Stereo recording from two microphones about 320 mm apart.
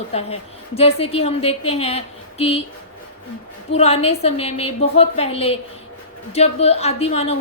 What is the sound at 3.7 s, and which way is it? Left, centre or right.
A woman's voice, centre.